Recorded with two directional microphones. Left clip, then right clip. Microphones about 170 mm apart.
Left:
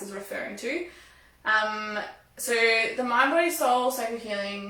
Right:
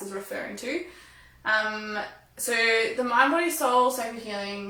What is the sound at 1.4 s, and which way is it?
A woman's voice, 15° right (ahead or behind).